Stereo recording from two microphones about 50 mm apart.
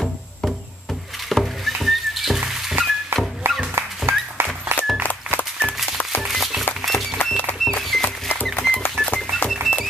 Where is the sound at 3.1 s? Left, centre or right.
Right.